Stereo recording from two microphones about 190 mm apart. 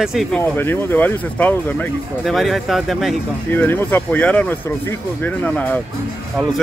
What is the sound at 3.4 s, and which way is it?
Speech, 10° left (ahead or behind).